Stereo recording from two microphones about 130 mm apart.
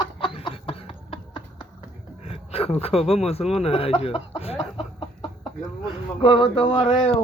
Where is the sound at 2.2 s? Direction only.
50° left (ahead or behind).